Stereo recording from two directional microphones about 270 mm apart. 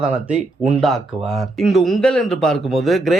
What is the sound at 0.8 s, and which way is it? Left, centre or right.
Speech, centre.